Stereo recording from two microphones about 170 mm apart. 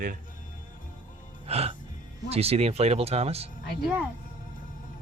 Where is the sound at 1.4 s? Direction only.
35° right (ahead or behind).